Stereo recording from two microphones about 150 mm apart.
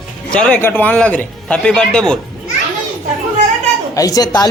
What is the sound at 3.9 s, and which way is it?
Speech, 25° left (ahead or behind).